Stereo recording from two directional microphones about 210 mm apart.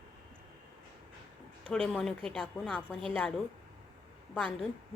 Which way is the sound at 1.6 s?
5° left (ahead or behind).